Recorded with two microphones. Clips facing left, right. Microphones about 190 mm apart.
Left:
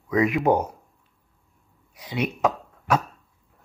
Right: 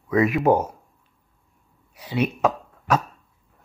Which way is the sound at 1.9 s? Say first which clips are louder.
Right 3 dB; 15° left (ahead or behind).